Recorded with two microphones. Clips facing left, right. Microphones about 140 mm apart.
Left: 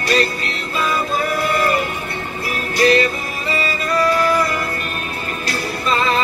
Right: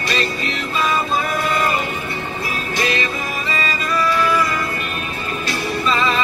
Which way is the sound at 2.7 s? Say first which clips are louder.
Left 8 dB; 40° left (ahead or behind).